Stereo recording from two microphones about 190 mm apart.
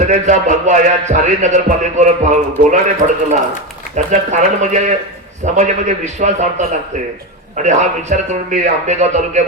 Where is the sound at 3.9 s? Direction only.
40° right (ahead or behind).